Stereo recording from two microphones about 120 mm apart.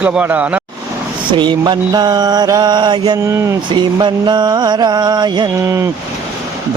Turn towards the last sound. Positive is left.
turn(degrees=-25)  # may be behind; listen again after turning